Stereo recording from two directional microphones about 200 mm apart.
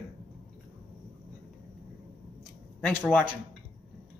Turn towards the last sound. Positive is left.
turn(degrees=-5)  # may be behind; listen again after turning